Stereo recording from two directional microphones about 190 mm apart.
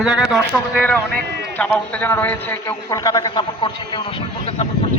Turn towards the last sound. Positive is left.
turn(degrees=30)  # may be behind; listen again after turning